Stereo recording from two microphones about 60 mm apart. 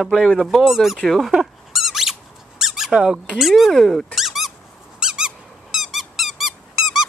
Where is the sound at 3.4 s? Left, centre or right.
Centre.